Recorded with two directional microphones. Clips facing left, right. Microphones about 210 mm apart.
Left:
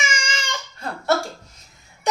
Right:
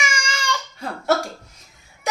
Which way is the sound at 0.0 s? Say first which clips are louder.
Right 1 dB; 20° left (ahead or behind).